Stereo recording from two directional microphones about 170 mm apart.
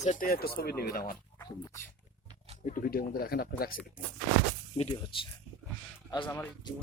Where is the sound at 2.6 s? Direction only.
55° left (ahead or behind).